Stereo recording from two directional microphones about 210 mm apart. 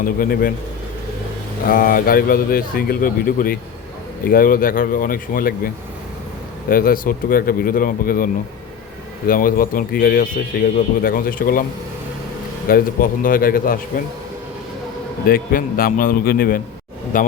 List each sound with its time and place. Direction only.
0.2 s a man's voice: 45° left (ahead or behind)
1.7 s a man's voice: 45° left (ahead or behind)
12.6 s a man's voice: 45° left (ahead or behind)
15.3 s a man's voice: 45° left (ahead or behind)